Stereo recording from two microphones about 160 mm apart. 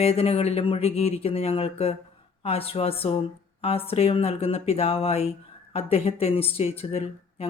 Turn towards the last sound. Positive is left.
turn(degrees=40)  # may be behind; listen again after turning